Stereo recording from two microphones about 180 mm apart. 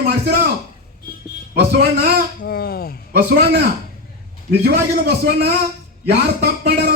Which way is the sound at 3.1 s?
60° right (ahead or behind).